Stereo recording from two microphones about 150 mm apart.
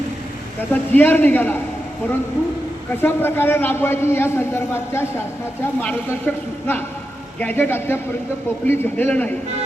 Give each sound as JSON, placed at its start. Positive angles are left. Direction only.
{"t": 0.7, "sound": "a man's voice", "side_deg": 15}
{"t": 3.0, "sound": "a man's voice", "side_deg": 15}